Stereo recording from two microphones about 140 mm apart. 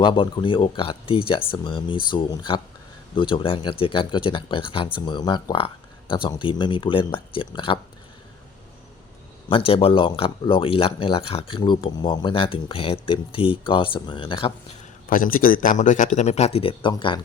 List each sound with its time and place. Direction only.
0.0 s speech: 35° left (ahead or behind)
9.5 s speech: 40° left (ahead or behind)
15.1 s a man's voice: 85° left; by 16.0 s 65° left (ahead or behind)
16.1 s speech: 50° left (ahead or behind); by 17.2 s 35° left (ahead or behind)